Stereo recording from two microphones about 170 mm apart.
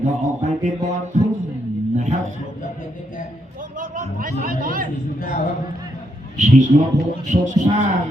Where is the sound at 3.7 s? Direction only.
55° right (ahead or behind).